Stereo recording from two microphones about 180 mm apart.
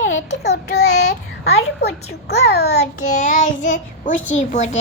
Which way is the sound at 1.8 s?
65° left (ahead or behind).